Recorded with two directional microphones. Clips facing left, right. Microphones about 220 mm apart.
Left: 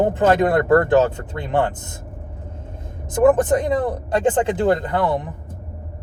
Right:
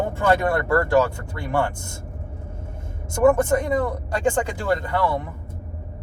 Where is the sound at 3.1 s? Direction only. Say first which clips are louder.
Left 2 dB; 20° left (ahead or behind).